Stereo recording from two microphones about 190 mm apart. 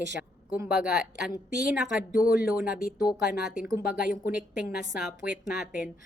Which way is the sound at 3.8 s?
50° left (ahead or behind).